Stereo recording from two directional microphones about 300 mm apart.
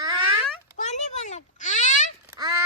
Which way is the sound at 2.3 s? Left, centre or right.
Centre.